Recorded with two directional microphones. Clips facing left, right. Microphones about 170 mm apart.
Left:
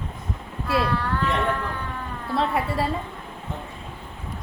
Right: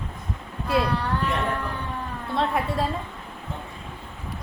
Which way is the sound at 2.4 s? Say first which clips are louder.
Left 1 dB; centre (ahead or behind).